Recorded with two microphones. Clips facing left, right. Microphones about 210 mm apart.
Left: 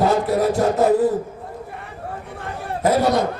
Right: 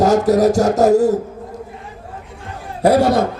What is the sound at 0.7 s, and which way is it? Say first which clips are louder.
Speech: right 4 dB; 80° right.